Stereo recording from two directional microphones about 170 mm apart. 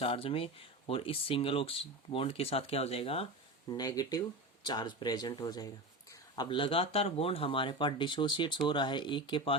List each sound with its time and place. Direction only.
0.0 s speech: 30° left (ahead or behind)
3.7 s speech: 20° left (ahead or behind)